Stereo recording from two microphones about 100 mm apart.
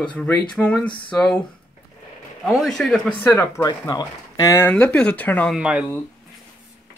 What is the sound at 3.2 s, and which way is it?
Speech, 25° left (ahead or behind).